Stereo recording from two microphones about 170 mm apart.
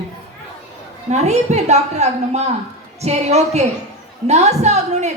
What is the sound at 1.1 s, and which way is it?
A woman's voice, 40° right (ahead or behind).